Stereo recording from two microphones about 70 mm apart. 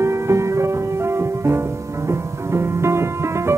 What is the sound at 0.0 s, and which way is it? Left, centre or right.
Music, right.